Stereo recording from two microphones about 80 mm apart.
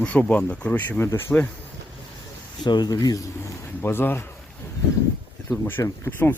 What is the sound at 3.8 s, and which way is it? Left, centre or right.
Speech, left.